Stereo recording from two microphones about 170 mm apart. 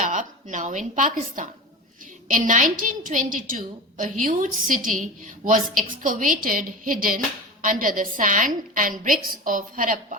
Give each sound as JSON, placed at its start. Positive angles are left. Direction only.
{"t": 0.0, "sound": "a woman's voice", "side_deg": -50}